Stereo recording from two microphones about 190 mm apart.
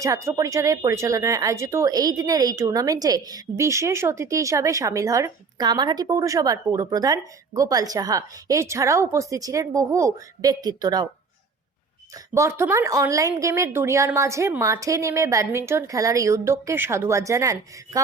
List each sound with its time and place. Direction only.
0.0 s speech: 15° right (ahead or behind)
12.3 s speech: 15° right (ahead or behind)